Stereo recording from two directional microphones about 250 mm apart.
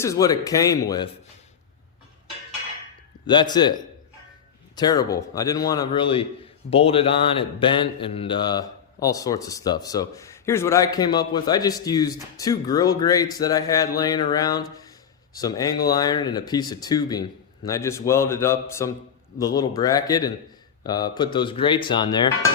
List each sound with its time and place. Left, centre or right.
0.0 s speech: centre
3.2 s speech: centre